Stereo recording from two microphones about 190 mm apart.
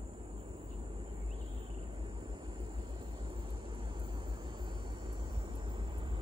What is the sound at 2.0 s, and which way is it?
Vehicle, 25° right (ahead or behind).